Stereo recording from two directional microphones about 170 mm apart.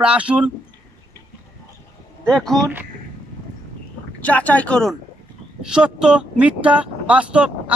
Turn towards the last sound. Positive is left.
turn(degrees=-5)  # may be behind; listen again after turning